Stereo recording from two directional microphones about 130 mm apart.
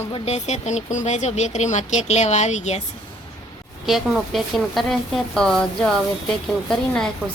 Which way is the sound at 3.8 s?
Centre (ahead or behind).